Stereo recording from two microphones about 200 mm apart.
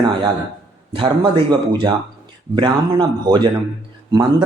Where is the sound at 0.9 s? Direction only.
25° right (ahead or behind).